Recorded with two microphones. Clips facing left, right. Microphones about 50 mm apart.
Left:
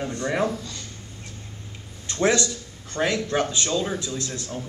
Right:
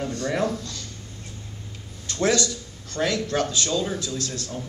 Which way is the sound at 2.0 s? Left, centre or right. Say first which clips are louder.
Left 1 dB; left.